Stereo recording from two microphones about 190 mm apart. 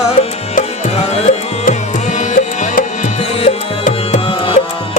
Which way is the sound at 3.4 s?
35° left (ahead or behind).